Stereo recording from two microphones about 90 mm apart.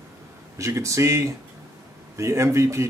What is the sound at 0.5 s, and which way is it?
Speech, 35° right (ahead or behind).